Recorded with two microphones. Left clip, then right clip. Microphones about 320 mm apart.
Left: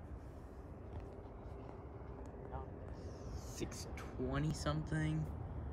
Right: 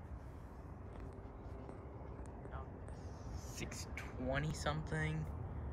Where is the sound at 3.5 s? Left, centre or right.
Centre.